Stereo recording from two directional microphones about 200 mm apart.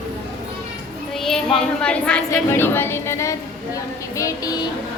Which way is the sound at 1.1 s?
Centre (ahead or behind).